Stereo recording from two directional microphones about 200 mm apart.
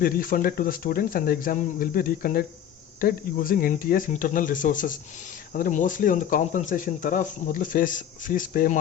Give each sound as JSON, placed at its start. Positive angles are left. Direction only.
{"t": 0.0, "sound": "speech", "side_deg": 45}